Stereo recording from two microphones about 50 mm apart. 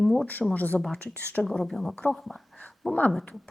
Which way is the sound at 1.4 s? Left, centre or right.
Centre.